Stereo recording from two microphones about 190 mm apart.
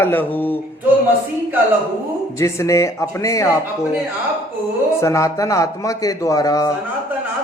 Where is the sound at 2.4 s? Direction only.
15° left (ahead or behind).